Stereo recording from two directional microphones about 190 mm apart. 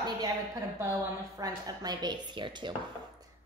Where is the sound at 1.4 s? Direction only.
20° right (ahead or behind).